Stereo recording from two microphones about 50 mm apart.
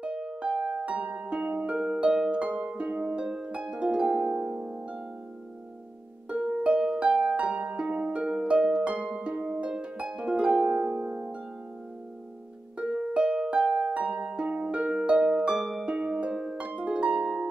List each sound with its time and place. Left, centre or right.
0.0 s music: right
1.5 s harp: right
6.2 s harp: right
12.7 s harp: centre
13.9 s harp: right